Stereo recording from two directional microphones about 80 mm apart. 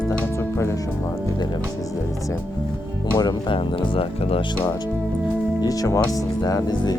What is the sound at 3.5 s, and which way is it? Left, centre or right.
Speech, left.